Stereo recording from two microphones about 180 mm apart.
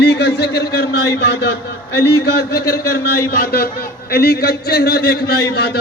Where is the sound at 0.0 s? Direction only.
65° left (ahead or behind).